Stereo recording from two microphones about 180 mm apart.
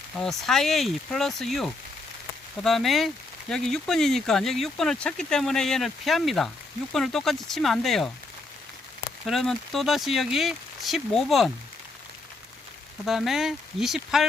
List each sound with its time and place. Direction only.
0.2 s speech: centre (ahead or behind)
9.2 s speech: centre (ahead or behind)
13.1 s speech: centre (ahead or behind)